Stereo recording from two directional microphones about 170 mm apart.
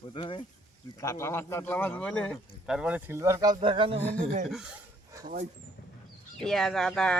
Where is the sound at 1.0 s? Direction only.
15° left (ahead or behind); by 3.5 s 20° right (ahead or behind).